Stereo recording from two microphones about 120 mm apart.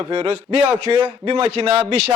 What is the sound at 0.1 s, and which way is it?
A man's voice, 35° right (ahead or behind).